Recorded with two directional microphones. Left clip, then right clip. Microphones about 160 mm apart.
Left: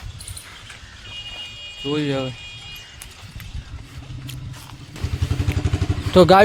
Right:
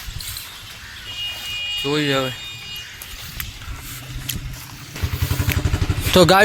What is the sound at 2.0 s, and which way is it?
Speech, 10° left (ahead or behind).